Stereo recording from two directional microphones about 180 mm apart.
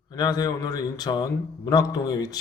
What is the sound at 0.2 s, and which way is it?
Speech, 20° left (ahead or behind).